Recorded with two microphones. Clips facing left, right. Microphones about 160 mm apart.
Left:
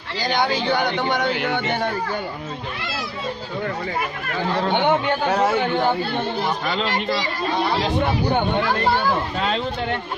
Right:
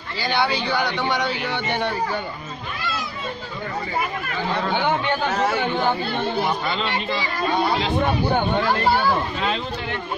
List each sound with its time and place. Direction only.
0.2 s speech: 45° left (ahead or behind); by 1.6 s 60° left (ahead or behind)
4.6 s a man's voice: 25° left (ahead or behind)
6.7 s speech: 40° left (ahead or behind)